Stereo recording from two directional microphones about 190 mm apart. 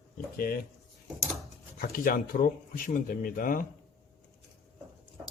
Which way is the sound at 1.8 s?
45° left (ahead or behind).